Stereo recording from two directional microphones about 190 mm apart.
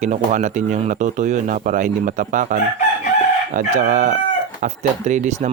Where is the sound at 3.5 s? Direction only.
40° right (ahead or behind).